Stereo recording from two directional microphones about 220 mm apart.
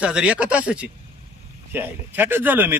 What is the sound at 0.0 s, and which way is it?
Speech, 5° right (ahead or behind).